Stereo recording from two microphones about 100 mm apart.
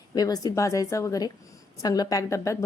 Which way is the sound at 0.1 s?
40° left (ahead or behind).